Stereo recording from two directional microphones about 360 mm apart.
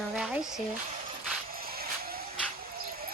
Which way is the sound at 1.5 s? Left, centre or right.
Right.